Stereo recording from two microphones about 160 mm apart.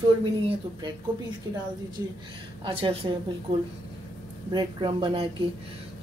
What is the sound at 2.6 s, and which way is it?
Speech, 30° right (ahead or behind).